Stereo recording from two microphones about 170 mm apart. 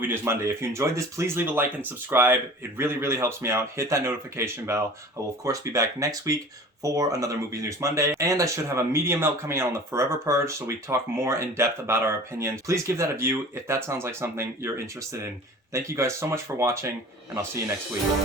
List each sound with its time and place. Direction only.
0.0 s speech: 15° right (ahead or behind)
15.7 s speech: 15° right (ahead or behind)